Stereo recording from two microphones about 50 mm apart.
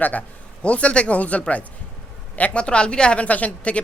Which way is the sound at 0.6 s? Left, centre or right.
Left.